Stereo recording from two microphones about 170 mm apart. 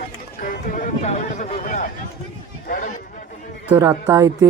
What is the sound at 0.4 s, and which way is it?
Speech, 50° left (ahead or behind).